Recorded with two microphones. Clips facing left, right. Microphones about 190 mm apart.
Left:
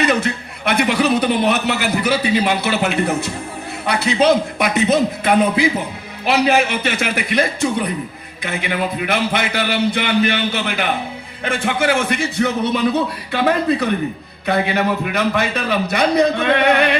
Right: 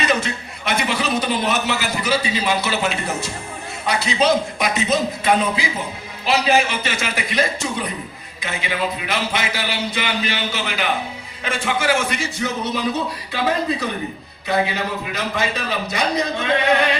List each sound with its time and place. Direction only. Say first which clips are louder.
0.0 s a man's voice: left 4 dB; 60° left (ahead or behind)